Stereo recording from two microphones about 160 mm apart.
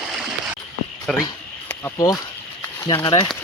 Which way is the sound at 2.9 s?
20° left (ahead or behind).